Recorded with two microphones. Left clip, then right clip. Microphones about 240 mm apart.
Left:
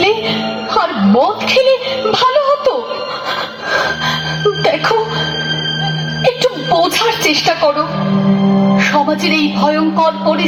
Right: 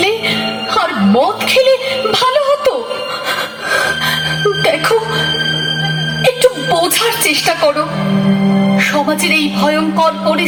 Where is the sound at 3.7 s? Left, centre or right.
Right.